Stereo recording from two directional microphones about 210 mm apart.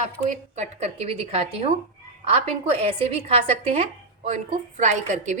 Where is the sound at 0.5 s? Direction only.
35° right (ahead or behind).